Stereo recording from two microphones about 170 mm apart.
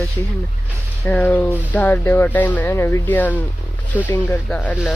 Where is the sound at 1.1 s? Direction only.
10° left (ahead or behind).